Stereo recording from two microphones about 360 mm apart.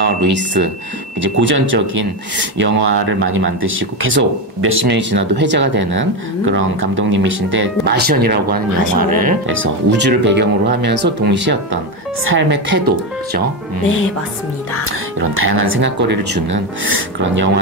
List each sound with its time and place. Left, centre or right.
0.0 s a sound: right
1.2 s speech: right
14.9 s speech: right